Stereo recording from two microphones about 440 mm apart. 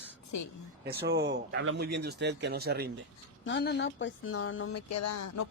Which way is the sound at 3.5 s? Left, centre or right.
Left.